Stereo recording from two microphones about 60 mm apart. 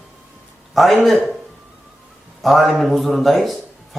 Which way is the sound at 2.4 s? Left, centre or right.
Centre.